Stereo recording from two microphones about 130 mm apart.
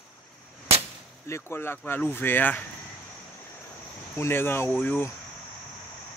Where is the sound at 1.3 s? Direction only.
20° left (ahead or behind).